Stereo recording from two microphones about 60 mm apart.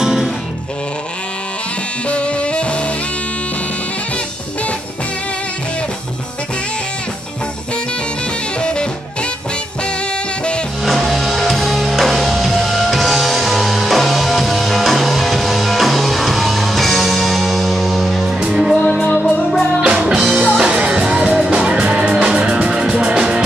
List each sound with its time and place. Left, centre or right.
0.0 s music: centre
2.0 s music: centre
8.5 s music: centre
10.9 s music: centre
18.4 s music: centre
18.7 s music: centre
19.8 s music: centre